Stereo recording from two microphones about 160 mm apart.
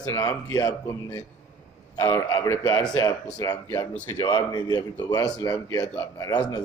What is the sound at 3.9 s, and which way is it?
Speech, 15° left (ahead or behind).